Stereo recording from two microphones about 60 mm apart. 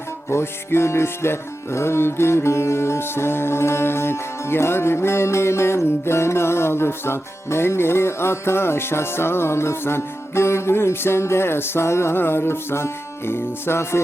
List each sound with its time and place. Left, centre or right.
0.3 s music: left